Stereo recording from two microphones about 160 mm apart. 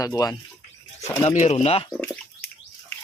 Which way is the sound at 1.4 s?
45° left (ahead or behind).